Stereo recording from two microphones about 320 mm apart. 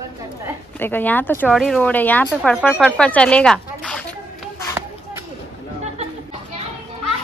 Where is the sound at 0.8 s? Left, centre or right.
Centre.